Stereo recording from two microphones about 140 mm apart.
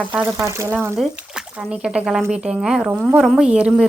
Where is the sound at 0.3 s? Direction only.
20° right (ahead or behind).